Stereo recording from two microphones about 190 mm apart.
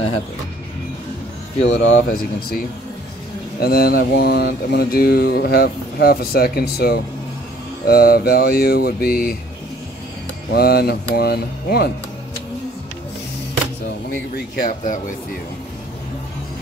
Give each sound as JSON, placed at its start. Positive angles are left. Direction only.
{"t": 1.7, "sound": "speech", "side_deg": 75}
{"t": 3.5, "sound": "mantra", "side_deg": 55}
{"t": 7.8, "sound": "speech", "side_deg": 50}
{"t": 10.5, "sound": "mantra", "side_deg": 55}
{"t": 14.3, "sound": "speech", "side_deg": 45}